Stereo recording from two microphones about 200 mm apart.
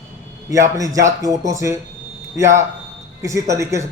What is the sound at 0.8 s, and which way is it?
Speech, 15° right (ahead or behind).